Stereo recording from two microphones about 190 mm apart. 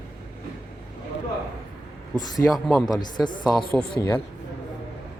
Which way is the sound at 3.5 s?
Centre (ahead or behind).